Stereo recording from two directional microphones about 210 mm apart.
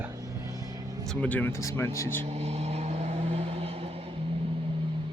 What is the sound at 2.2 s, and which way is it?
Vehicle, 30° right (ahead or behind).